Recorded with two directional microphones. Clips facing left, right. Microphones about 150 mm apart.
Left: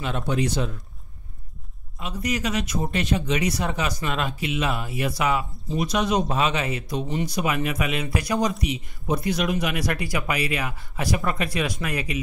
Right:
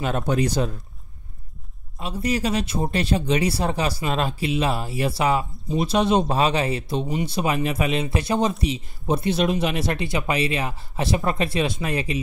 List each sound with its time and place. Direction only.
0.0 s speech: 45° right (ahead or behind)
2.0 s speech: 30° right (ahead or behind)